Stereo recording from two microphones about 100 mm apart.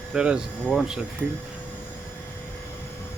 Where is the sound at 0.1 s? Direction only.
10° right (ahead or behind).